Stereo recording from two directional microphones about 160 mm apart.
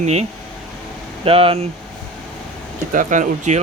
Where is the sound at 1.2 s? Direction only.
35° right (ahead or behind).